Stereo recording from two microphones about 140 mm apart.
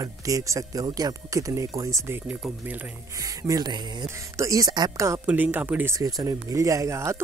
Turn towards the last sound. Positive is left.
turn(degrees=-20)  # may be behind; listen again after turning